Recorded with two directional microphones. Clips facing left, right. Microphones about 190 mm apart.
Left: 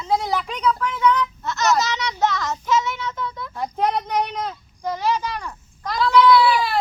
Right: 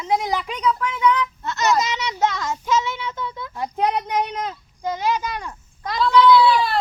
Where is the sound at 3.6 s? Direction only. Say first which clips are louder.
Even; 10° right (ahead or behind).